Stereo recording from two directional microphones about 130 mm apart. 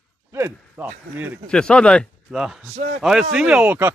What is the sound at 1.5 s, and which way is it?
Speech, 5° left (ahead or behind).